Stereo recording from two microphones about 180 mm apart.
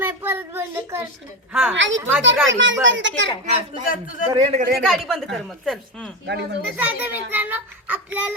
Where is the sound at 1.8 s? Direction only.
90° right.